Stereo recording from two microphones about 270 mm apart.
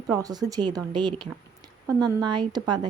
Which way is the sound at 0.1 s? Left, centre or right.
Centre.